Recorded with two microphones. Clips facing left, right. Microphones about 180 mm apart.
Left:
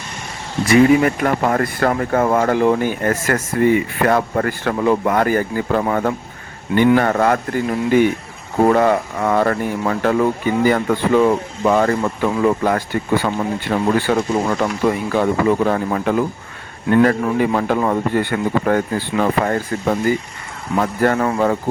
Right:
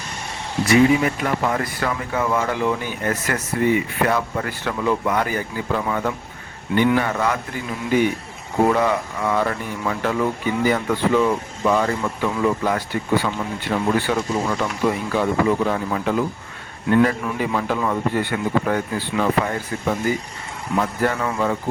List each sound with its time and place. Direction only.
0.7 s speech: 55° left (ahead or behind)